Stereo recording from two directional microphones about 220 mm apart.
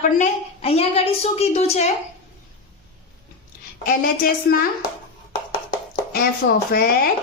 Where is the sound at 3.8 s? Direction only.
40° left (ahead or behind).